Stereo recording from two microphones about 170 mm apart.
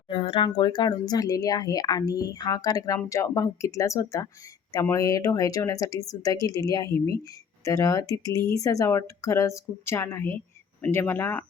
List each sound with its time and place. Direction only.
0.1 s speech: 30° left (ahead or behind); by 11.4 s 10° left (ahead or behind)